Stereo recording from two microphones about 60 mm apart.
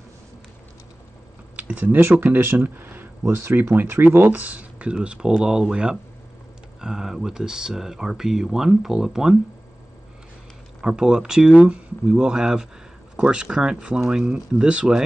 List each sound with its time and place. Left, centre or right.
1.6 s speech: right
2.0 s speech: right
4.3 s speech: right; by 9.4 s centre
10.8 s speech: centre